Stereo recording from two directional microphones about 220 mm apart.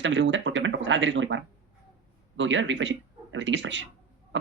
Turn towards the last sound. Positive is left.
turn(degrees=-55)  # may be behind; listen again after turning